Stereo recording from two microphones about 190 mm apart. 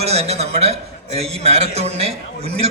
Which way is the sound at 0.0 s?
35° right (ahead or behind).